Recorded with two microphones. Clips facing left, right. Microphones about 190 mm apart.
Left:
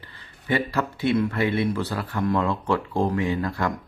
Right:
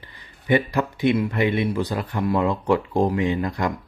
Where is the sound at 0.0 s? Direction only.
15° right (ahead or behind).